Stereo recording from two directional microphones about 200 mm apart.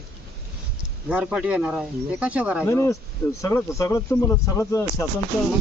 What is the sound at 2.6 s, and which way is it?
Speech, 15° left (ahead or behind).